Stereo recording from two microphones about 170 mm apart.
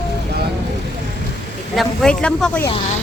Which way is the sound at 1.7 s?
5° left (ahead or behind).